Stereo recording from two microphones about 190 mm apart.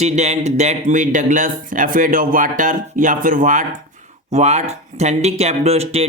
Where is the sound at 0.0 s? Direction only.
35° right (ahead or behind).